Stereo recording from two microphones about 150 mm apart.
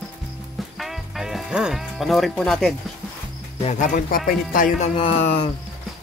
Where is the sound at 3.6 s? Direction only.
50° left (ahead or behind); by 4.7 s 70° left (ahead or behind).